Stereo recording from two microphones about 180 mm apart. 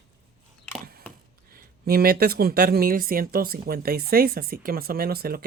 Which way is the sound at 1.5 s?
55° right (ahead or behind).